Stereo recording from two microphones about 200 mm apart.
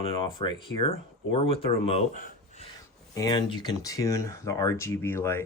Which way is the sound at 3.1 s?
20° left (ahead or behind).